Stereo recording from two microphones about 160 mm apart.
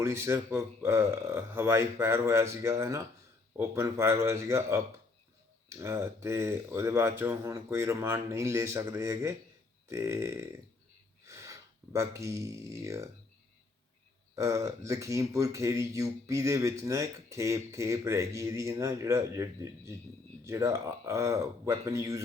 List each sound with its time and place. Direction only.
0.0 s speech: 15° right (ahead or behind)
14.3 s speech: 20° right (ahead or behind)